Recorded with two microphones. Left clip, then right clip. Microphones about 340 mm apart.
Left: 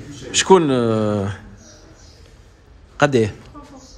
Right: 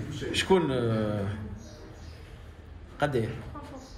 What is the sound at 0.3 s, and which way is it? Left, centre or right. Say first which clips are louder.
Speech: left 12 dB; centre.